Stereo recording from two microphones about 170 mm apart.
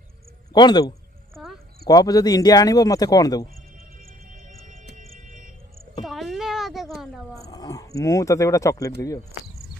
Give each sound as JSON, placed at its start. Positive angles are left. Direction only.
{"t": 0.5, "sound": "speech", "side_deg": 25}
{"t": 1.3, "sound": "a sound", "side_deg": 0}
{"t": 1.9, "sound": "speech", "side_deg": 20}
{"t": 4.3, "sound": "music", "side_deg": -50}
{"t": 6.0, "sound": "a sound", "side_deg": 0}
{"t": 7.4, "sound": "speech", "side_deg": 20}